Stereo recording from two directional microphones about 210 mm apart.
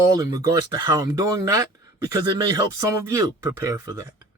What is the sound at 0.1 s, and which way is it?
Speech, 15° right (ahead or behind).